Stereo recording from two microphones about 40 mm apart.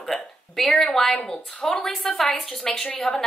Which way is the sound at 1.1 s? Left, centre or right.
Left.